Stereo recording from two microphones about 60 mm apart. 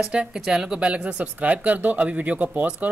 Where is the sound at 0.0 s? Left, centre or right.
Centre.